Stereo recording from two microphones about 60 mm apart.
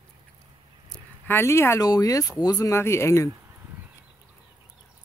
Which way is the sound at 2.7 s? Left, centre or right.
Left.